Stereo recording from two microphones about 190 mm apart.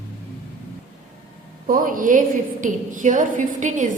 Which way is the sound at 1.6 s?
45° right (ahead or behind).